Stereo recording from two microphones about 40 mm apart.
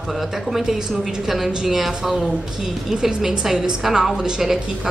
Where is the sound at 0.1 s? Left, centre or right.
Centre.